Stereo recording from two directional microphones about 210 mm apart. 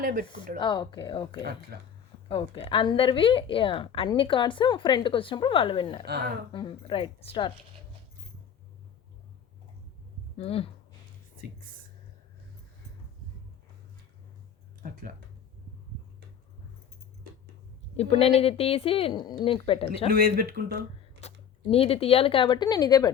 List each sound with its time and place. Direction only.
0.0 s speech: 45° right (ahead or behind)
0.3 s a woman's voice: 25° left (ahead or behind)
1.7 s speech: 50° right (ahead or behind)
2.3 s a woman's voice: 25° left (ahead or behind)
6.1 s speech: 50° right (ahead or behind)
6.5 s a woman's voice: 25° left (ahead or behind)
10.3 s a woman's voice: 30° left (ahead or behind)
14.8 s speech: 40° right (ahead or behind)
17.9 s a woman's voice: 30° left (ahead or behind)
20.1 s speech: 45° right (ahead or behind)
21.2 s speech: 30° left (ahead or behind)